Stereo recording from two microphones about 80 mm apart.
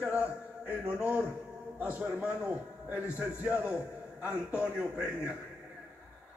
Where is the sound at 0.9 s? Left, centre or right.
Centre.